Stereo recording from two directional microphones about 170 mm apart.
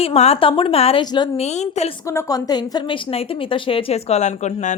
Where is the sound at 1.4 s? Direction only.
40° left (ahead or behind).